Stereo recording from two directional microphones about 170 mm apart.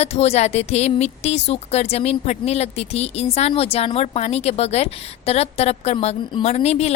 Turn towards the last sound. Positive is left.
turn(degrees=40)  # may be behind; listen again after turning